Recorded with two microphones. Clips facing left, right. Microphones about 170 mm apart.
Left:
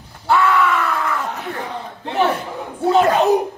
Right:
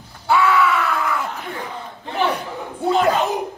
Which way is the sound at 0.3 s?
Centre (ahead or behind).